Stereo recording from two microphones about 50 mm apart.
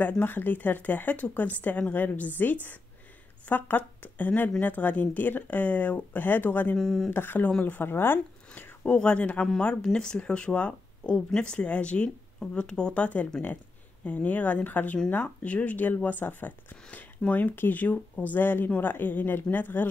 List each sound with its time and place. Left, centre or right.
0.2 s speech: left
6.8 s speech: centre
7.1 s speech: left
8.8 s speech: left